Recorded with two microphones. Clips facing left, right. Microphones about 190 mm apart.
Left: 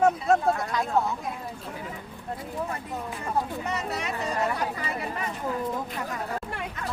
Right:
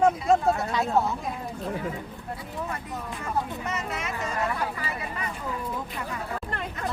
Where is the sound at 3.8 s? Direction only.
35° left (ahead or behind).